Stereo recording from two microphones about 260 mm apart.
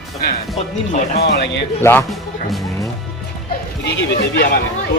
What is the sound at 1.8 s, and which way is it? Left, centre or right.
Speech, centre.